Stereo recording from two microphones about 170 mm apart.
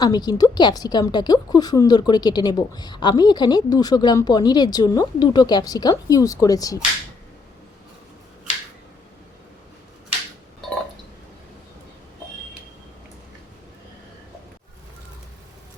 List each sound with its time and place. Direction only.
0.0 s a woman's voice: 25° left (ahead or behind)